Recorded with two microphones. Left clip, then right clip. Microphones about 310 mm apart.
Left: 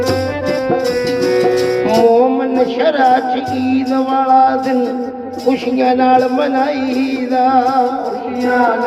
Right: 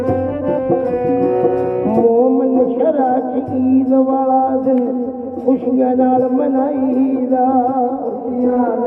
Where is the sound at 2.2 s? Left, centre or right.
Left.